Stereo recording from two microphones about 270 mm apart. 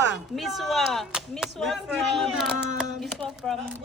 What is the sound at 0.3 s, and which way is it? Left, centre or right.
Speech, centre.